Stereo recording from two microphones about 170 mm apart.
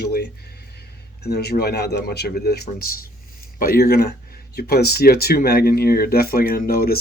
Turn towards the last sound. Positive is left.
turn(degrees=60)  # may be behind; listen again after turning